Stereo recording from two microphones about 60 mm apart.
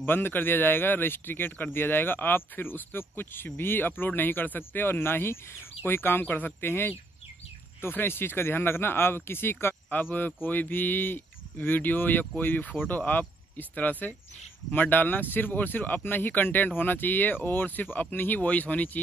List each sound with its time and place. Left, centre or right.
0.0 s speech: left
9.8 s speech: left